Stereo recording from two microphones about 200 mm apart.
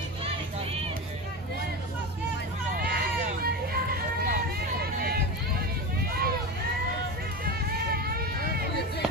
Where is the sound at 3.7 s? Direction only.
45° right (ahead or behind).